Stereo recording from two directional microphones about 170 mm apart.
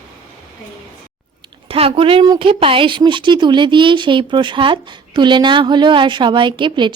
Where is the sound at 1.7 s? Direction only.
35° right (ahead or behind).